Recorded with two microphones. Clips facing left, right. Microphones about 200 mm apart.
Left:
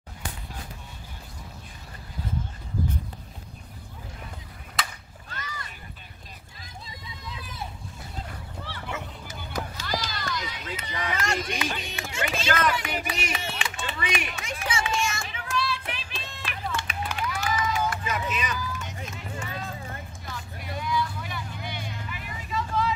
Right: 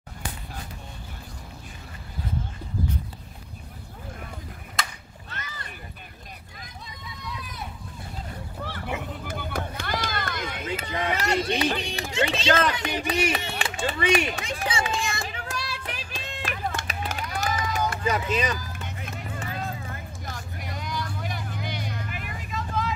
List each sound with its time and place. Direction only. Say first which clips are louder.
7.2 s run: right 3 dB; 25° left (ahead or behind)
8.6 s music: right 3 dB; 50° right (ahead or behind)
9.3 s a sound: right 2 dB; 55° right (ahead or behind)
10.8 s a sound: right 2 dB; 30° right (ahead or behind)
12.2 s run: right 4 dB; 30° right (ahead or behind)
18.7 s run: left 1 dB; 55° right (ahead or behind)
20.2 s vehicle: right 1 dB; 45° right (ahead or behind)